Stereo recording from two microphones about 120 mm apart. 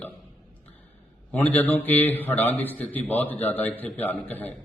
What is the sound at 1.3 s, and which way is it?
A man's voice, 15° left (ahead or behind).